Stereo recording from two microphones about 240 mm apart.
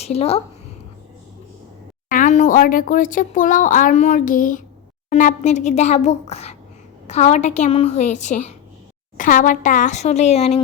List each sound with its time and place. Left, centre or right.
0.0 s a woman's voice: left
2.0 s speech: left